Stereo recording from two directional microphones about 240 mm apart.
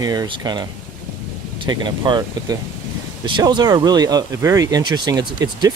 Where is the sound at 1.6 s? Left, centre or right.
Centre.